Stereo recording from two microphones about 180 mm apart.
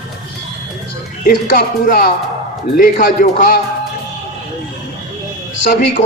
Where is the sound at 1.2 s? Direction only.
50° left (ahead or behind).